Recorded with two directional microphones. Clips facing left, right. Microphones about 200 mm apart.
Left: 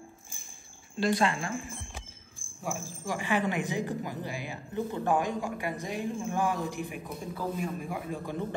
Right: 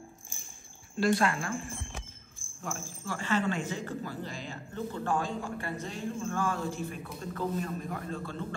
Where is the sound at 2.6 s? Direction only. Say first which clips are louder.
Left 3 dB; 15° left (ahead or behind).